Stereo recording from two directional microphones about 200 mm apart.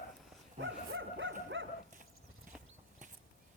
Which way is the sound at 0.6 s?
70° right (ahead or behind).